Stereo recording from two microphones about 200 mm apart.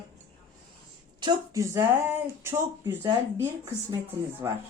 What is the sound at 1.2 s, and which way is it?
Speech, 20° right (ahead or behind).